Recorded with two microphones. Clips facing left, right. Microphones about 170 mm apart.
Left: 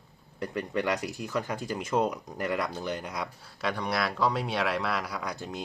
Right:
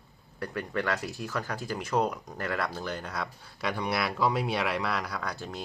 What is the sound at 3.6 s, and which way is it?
Speech, 5° right (ahead or behind).